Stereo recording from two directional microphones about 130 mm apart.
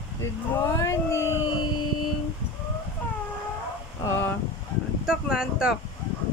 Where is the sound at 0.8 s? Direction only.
25° left (ahead or behind).